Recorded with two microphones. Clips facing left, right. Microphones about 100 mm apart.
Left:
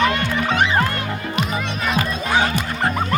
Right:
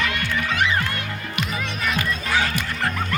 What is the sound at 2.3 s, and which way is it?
Music, 20° left (ahead or behind).